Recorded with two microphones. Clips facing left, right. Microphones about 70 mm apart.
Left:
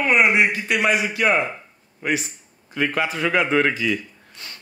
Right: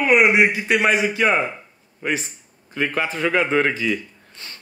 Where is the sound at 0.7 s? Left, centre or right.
Right.